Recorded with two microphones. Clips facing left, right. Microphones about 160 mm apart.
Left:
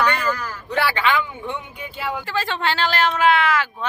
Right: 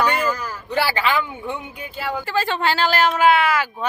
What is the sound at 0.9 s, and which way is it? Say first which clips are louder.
Speech: left 3 dB; 35° right (ahead or behind).